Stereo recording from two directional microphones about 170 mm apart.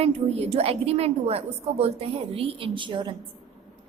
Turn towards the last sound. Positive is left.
turn(degrees=-30)  # may be behind; listen again after turning